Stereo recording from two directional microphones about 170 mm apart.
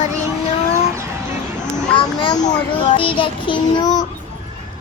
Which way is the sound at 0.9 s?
15° right (ahead or behind).